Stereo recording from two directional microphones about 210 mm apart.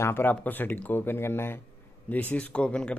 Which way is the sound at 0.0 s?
10° left (ahead or behind).